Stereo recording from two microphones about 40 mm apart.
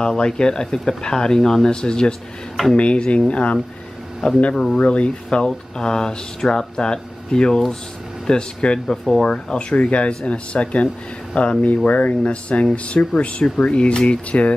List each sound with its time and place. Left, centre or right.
0.0 s speech: centre
4.2 s speech: centre
4.7 s speech: left
8.9 s speech: centre
9.3 s speech: left